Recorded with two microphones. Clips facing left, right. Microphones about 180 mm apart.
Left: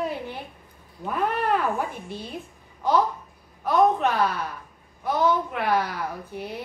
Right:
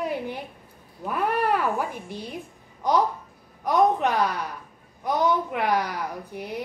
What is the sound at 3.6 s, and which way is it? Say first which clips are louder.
A woman's voice: left 1 dB; 15° right (ahead or behind).